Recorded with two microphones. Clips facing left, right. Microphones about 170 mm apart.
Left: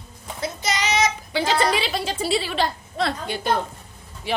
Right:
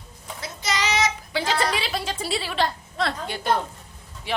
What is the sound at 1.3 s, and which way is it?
A woman's voice, centre (ahead or behind).